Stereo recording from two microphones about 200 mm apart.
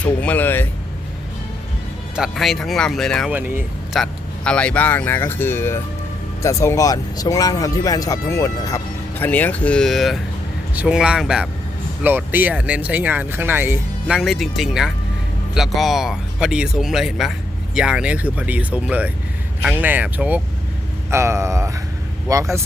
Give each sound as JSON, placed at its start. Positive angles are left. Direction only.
{"t": 0.0, "sound": "speech", "side_deg": 5}
{"t": 2.1, "sound": "speech", "side_deg": 0}
{"t": 3.3, "sound": "speech", "side_deg": -10}
{"t": 4.0, "sound": "speech", "side_deg": 5}